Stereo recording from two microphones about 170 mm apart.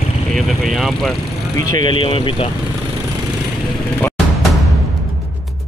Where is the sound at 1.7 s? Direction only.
30° left (ahead or behind).